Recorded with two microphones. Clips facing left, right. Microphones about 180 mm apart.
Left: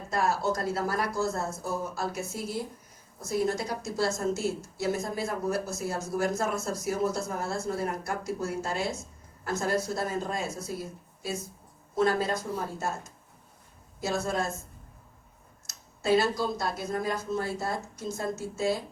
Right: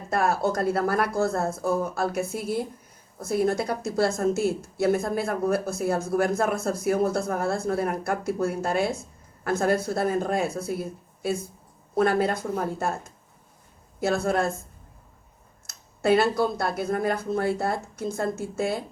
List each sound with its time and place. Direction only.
0.1 s a woman's voice: 60° right (ahead or behind)
14.0 s a woman's voice: 60° right (ahead or behind)
15.6 s a woman's voice: 60° right (ahead or behind)